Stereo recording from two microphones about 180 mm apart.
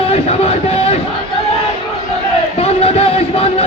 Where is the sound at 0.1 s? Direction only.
35° left (ahead or behind).